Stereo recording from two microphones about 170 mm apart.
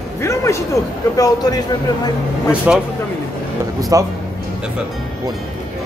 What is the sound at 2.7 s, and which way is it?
Speech, 10° right (ahead or behind).